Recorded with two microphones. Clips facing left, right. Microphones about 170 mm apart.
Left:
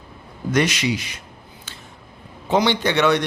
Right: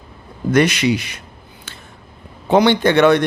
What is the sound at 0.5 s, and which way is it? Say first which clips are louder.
Speech: right 5 dB; 60° right (ahead or behind).